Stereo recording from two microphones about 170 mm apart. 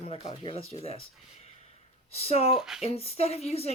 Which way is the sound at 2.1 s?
35° left (ahead or behind).